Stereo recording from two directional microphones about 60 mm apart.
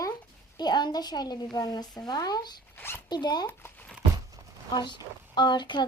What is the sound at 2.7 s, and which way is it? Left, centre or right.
Zipper, left.